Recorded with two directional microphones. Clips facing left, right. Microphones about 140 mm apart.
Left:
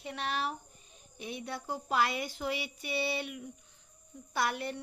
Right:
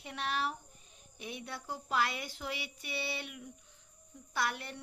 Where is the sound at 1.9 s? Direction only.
15° left (ahead or behind).